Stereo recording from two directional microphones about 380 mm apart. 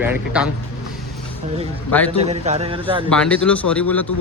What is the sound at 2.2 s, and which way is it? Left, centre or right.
Speech, centre.